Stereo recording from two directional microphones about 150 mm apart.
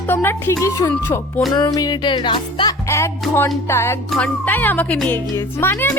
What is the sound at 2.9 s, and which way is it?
Speech, 20° left (ahead or behind).